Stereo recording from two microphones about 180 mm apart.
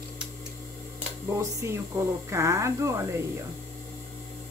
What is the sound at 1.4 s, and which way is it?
Speech, 15° right (ahead or behind).